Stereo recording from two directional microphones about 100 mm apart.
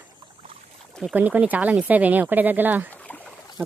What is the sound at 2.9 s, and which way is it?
Boat, 15° left (ahead or behind).